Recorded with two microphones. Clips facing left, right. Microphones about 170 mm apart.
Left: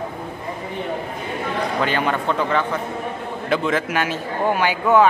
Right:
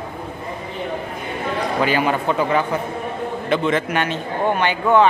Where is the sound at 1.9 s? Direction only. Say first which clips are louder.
Right 2 dB; 5° right (ahead or behind).